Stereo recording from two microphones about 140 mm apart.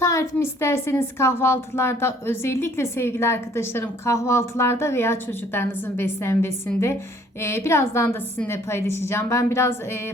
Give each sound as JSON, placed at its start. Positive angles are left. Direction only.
{"t": 0.0, "sound": "a woman's voice", "side_deg": 20}